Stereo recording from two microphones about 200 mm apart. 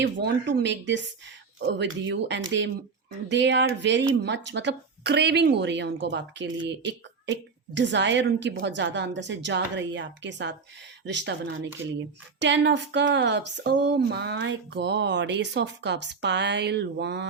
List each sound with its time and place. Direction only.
0.0 s speech: 60° right (ahead or behind)